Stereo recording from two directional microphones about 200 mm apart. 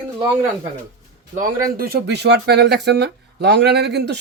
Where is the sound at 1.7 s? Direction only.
50° right (ahead or behind).